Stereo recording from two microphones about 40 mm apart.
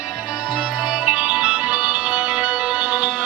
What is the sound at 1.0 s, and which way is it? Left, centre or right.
Music, right.